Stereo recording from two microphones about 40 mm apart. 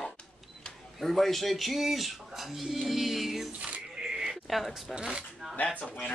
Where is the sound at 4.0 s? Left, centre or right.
Centre.